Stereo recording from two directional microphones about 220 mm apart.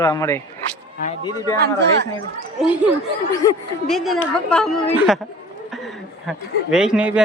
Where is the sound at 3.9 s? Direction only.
Centre (ahead or behind).